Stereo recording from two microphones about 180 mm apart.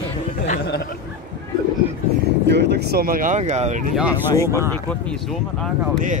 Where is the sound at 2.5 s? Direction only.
70° right (ahead or behind); by 3.8 s 40° right (ahead or behind).